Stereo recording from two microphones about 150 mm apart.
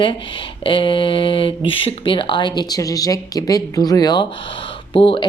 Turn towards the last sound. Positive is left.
turn(degrees=35)  # may be behind; listen again after turning